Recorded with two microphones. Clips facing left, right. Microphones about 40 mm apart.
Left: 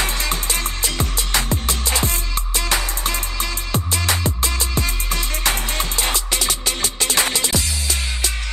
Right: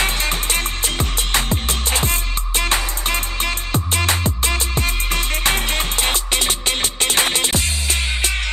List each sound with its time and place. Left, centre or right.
0.0 s music: right